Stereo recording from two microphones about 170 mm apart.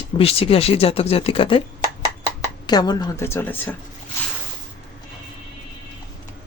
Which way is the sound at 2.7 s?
25° left (ahead or behind).